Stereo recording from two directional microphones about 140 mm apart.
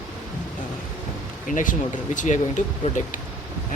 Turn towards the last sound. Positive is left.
turn(degrees=60)  # may be behind; listen again after turning